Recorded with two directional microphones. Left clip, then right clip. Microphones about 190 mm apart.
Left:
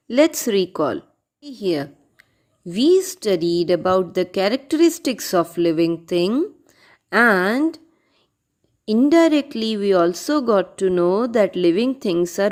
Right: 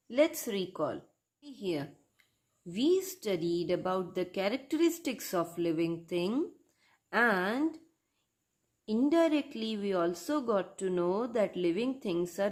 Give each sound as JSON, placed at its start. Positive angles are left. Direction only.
{"t": 0.1, "sound": "a woman's voice", "side_deg": 40}
{"t": 8.8, "sound": "speech", "side_deg": 35}